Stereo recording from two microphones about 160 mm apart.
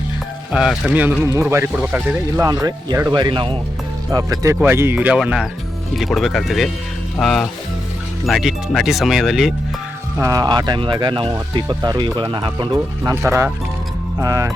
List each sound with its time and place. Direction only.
0.5 s speech: 5° right (ahead or behind)
2.5 s speech: 20° right (ahead or behind); by 9.6 s centre (ahead or behind)
10.2 s speech: 20° right (ahead or behind)